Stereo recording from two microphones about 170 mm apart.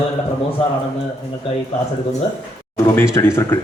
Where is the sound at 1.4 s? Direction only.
30° left (ahead or behind).